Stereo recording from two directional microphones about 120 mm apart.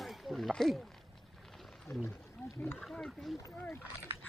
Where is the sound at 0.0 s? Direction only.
Centre (ahead or behind).